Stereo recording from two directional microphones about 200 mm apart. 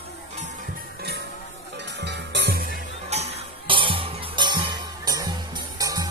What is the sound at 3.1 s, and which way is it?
Music, 35° right (ahead or behind).